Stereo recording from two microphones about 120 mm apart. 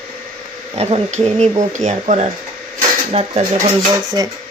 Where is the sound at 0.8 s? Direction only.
55° right (ahead or behind); by 2.2 s 75° right (ahead or behind).